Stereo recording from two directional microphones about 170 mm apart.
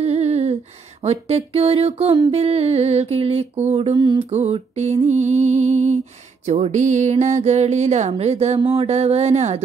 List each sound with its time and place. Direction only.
0.0 s humming: 40° right (ahead or behind)
1.0 s music: 35° right (ahead or behind)
4.3 s music: 40° right (ahead or behind)